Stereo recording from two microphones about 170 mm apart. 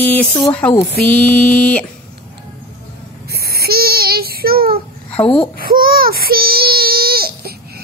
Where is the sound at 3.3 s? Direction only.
65° right (ahead or behind).